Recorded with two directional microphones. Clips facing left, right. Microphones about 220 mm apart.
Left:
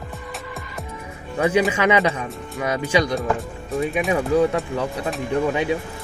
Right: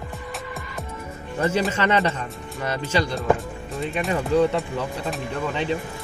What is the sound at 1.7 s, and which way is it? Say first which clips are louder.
Speech: left 3 dB; 10° left (ahead or behind).